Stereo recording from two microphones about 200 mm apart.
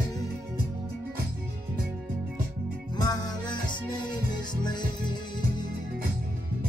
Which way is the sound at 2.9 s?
20° left (ahead or behind).